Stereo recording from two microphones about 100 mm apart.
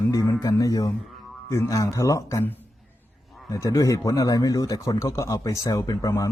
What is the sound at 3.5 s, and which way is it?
Speech, 35° left (ahead or behind).